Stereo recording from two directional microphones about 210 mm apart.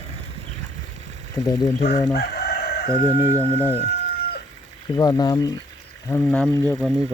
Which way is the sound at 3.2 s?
15° right (ahead or behind).